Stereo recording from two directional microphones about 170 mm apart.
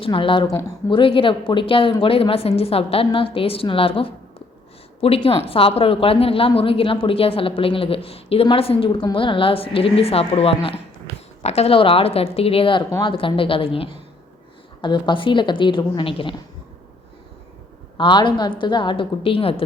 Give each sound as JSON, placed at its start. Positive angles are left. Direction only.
{"t": 0.0, "sound": "a woman's voice", "side_deg": 30}
{"t": 17.9, "sound": "a woman's voice", "side_deg": 30}